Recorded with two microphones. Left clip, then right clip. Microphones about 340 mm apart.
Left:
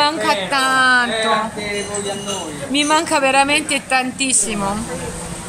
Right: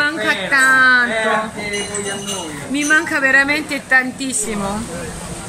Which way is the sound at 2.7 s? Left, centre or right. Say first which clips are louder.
Even; centre.